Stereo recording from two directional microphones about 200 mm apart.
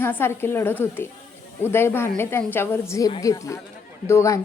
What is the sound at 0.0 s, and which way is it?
A woman's voice, 10° left (ahead or behind).